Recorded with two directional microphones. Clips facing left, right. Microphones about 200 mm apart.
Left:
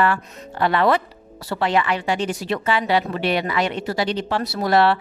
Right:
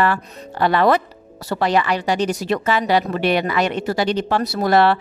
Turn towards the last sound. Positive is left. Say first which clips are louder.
# right 2 dB
turn(degrees=-45)  # may be behind; listen again after turning